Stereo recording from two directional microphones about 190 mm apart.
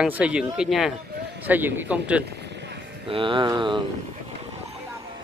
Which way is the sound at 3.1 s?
25° right (ahead or behind).